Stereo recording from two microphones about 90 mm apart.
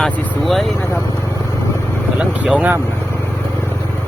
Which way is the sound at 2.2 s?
15° right (ahead or behind).